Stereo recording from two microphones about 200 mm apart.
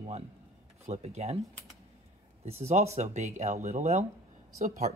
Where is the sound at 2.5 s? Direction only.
30° right (ahead or behind).